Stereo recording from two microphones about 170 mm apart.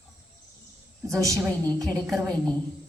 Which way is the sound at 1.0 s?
15° right (ahead or behind).